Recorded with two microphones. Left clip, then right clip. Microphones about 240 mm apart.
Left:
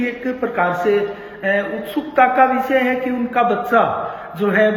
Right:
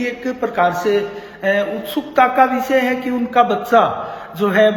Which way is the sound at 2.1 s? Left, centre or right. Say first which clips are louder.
Even; centre.